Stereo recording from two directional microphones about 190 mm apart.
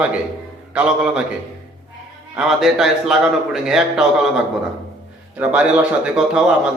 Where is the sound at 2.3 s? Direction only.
Centre (ahead or behind).